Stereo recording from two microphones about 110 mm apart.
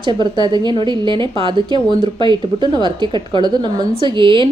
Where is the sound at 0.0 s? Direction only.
45° right (ahead or behind).